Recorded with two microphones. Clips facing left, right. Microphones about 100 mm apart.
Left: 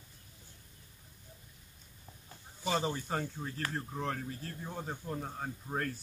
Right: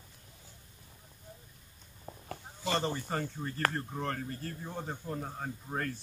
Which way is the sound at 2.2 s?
75° right (ahead or behind).